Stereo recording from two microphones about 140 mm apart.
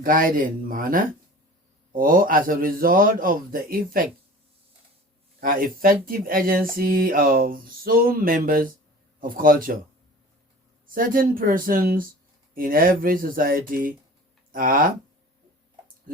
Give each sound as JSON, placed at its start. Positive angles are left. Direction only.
{"t": 0.0, "sound": "speech", "side_deg": -90}
{"t": 5.4, "sound": "speech", "side_deg": -90}
{"t": 10.9, "sound": "speech", "side_deg": -80}